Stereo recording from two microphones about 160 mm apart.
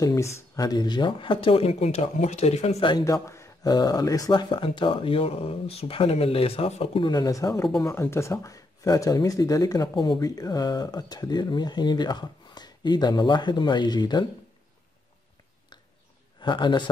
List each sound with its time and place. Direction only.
0.0 s speech: 20° left (ahead or behind)
16.3 s speech: 30° left (ahead or behind)